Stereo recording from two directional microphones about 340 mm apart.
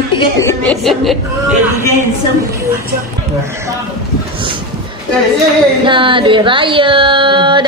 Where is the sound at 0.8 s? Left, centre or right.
Centre.